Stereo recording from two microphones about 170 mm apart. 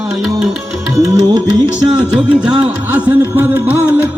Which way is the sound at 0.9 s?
20° right (ahead or behind).